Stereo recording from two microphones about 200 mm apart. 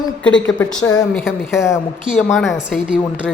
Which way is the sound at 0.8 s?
20° left (ahead or behind).